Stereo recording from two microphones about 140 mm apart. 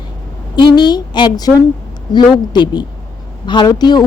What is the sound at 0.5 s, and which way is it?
A woman's voice, 30° left (ahead or behind).